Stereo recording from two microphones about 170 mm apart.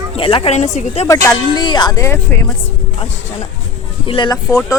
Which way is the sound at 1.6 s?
25° left (ahead or behind).